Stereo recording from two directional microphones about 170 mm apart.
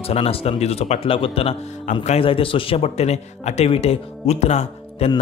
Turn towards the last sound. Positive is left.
turn(degrees=40)  # may be behind; listen again after turning